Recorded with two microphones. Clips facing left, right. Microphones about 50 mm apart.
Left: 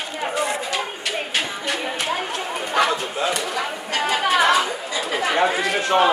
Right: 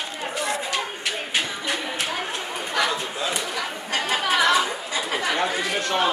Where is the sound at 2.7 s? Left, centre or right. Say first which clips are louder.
Left 4 dB; left.